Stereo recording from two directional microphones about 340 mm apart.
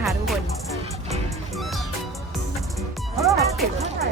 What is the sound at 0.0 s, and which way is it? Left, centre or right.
Music, centre.